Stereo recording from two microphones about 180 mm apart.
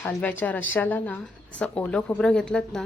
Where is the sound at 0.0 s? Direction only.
10° left (ahead or behind).